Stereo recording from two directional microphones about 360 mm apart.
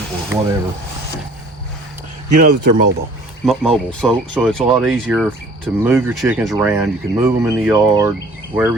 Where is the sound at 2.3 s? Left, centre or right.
Right.